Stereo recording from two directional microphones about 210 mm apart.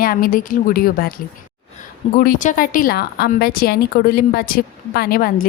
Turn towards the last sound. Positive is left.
turn(degrees=45)  # may be behind; listen again after turning